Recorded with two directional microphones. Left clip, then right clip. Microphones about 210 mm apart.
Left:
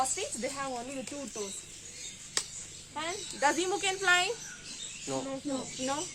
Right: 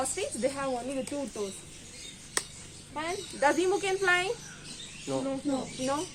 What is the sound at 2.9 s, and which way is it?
Speech, 25° left (ahead or behind).